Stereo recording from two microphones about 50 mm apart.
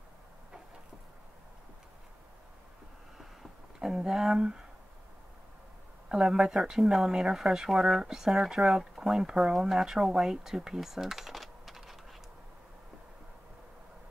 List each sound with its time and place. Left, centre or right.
3.8 s speech: centre
4.4 s speech: centre
6.0 s speech: centre